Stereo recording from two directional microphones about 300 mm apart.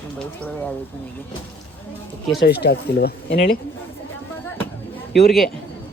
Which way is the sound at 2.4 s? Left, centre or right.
Left.